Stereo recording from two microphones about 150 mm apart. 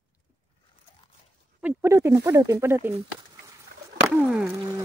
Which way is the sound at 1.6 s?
10° right (ahead or behind).